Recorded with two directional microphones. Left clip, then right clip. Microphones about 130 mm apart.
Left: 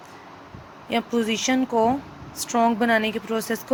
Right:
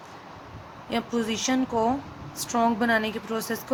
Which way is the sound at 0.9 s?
20° left (ahead or behind).